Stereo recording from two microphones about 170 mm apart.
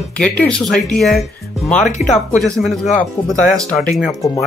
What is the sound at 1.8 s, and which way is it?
Speech, 45° left (ahead or behind).